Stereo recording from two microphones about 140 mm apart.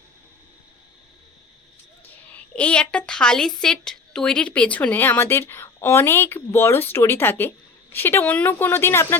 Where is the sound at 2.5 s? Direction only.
10° left (ahead or behind).